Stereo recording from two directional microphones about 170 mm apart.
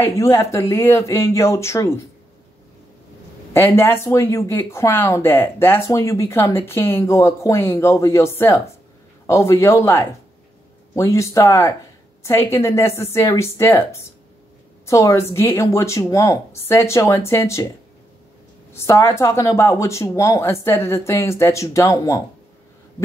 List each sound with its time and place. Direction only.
0.0 s speech: 15° left (ahead or behind)
3.5 s speech: 15° left (ahead or behind)
18.7 s speech: 15° left (ahead or behind)